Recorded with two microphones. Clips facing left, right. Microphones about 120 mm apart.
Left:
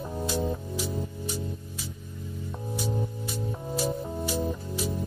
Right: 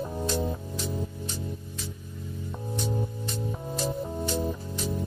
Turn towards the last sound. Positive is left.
turn(degrees=5)  # may be behind; listen again after turning